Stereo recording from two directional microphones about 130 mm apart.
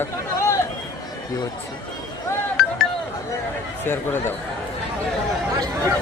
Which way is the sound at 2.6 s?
Centre (ahead or behind).